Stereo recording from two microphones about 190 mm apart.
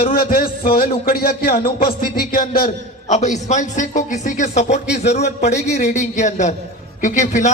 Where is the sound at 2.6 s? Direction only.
35° left (ahead or behind).